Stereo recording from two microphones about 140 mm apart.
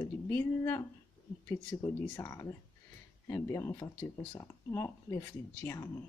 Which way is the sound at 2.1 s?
20° left (ahead or behind).